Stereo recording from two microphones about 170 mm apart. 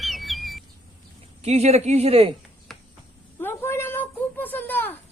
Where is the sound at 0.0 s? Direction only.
Centre (ahead or behind).